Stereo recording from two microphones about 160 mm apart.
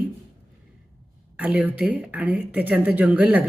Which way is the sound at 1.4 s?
10° right (ahead or behind).